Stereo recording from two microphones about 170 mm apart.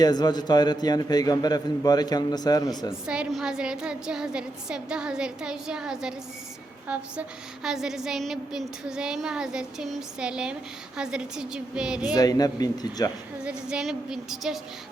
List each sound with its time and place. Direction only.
0.0 s a man's voice: 25° left (ahead or behind)
2.9 s a woman's voice: 5° right (ahead or behind)
12.1 s a man's voice: 20° left (ahead or behind)
13.4 s a woman's voice: 5° right (ahead or behind)